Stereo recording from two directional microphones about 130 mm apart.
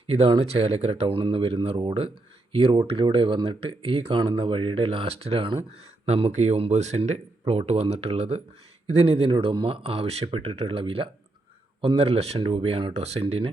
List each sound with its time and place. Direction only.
0.1 s speech: 50° right (ahead or behind)